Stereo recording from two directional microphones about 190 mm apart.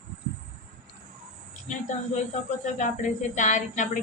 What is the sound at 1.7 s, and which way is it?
Speech, 40° left (ahead or behind).